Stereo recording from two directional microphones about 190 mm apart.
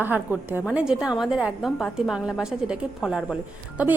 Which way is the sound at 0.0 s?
10° right (ahead or behind).